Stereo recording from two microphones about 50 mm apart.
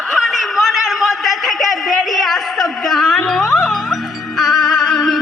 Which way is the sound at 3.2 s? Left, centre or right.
Centre.